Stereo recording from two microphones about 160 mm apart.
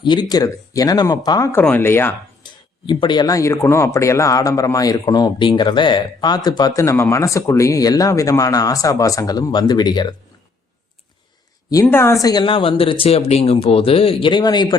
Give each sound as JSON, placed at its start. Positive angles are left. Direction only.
{"t": 0.0, "sound": "speech", "side_deg": 30}
{"t": 1.5, "sound": "speech", "side_deg": 10}
{"t": 2.4, "sound": "speech", "side_deg": 30}
{"t": 11.7, "sound": "speech", "side_deg": 20}